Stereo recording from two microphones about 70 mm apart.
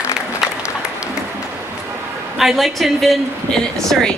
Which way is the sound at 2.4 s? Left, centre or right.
Centre.